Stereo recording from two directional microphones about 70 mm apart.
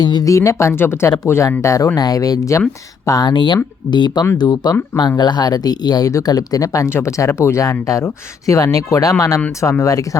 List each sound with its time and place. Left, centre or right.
0.0 s speech: left
0.3 s speech: left
0.8 s speech: left
2.0 s speech: left
4.4 s speech: left
6.1 s speech: left
6.8 s speech: left